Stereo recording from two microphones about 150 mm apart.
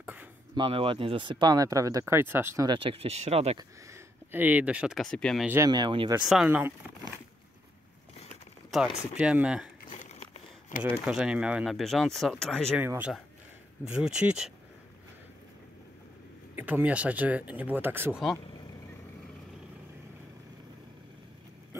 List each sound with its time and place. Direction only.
0.0 s a sound: 10° right (ahead or behind)
0.6 s speech: 35° right (ahead or behind); by 2.7 s 15° right (ahead or behind)
2.7 s speech: 35° right (ahead or behind)
3.5 s speech: 20° right (ahead or behind)
5.0 s speech: 5° left (ahead or behind)
5.7 s speech: 30° right (ahead or behind)
6.2 s speech: 5° right (ahead or behind)
8.6 s speech: centre (ahead or behind)
9.8 s crumpling: 55° left (ahead or behind)
11.1 s speech: 5° right (ahead or behind)
12.7 s speech: 10° right (ahead or behind)
16.5 s speech: 10° right (ahead or behind)